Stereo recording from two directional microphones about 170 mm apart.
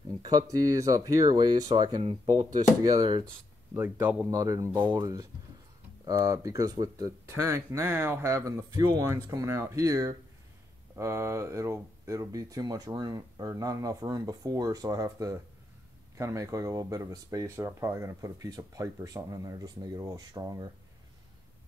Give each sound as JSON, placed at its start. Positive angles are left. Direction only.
{"t": 0.2, "sound": "speech", "side_deg": -25}
{"t": 3.7, "sound": "speech", "side_deg": -10}